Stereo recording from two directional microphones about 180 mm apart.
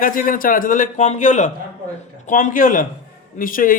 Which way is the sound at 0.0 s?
50° left (ahead or behind).